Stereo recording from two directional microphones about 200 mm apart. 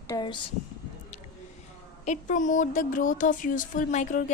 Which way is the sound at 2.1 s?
40° left (ahead or behind).